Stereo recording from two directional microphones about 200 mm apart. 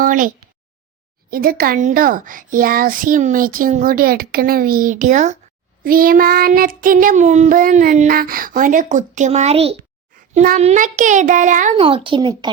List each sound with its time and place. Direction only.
0.0 s a child's voice: 40° right (ahead or behind)
11.9 s a child's voice: 25° right (ahead or behind)